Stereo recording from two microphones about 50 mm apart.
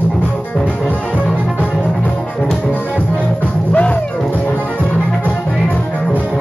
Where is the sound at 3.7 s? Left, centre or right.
Left.